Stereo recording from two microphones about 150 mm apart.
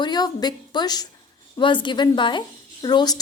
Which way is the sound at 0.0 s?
30° left (ahead or behind).